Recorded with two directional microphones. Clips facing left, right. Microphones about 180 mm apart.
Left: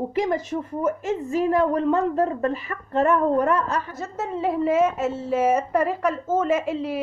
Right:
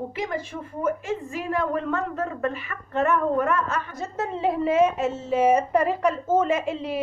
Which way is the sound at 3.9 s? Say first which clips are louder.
Even; 5° left (ahead or behind).